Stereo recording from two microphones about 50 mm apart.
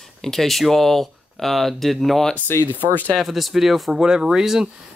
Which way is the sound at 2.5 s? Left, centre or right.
Left.